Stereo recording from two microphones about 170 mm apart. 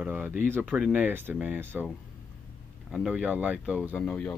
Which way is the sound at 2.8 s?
5° right (ahead or behind).